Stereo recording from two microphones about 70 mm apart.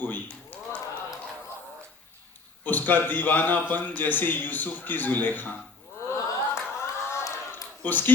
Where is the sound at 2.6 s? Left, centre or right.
Left.